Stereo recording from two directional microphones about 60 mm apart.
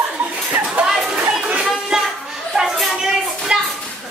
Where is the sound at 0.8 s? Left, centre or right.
Centre.